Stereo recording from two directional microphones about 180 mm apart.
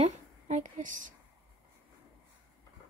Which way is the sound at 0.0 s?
45° right (ahead or behind).